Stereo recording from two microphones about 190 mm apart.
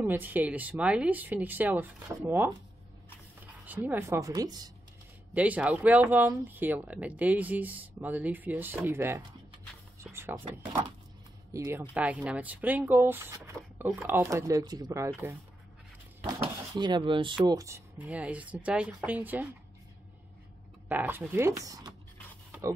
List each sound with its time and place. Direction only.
0.0 s speech: 10° right (ahead or behind)
3.6 s speech: 10° right (ahead or behind)
5.3 s speech: 5° right (ahead or behind)
10.4 s speech: 25° right (ahead or behind)
11.5 s speech: 15° right (ahead or behind)
20.9 s speech: 10° right (ahead or behind)